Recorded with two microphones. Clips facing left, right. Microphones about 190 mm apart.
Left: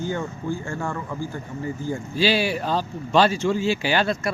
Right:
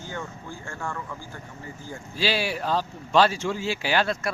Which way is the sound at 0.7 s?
25° left (ahead or behind).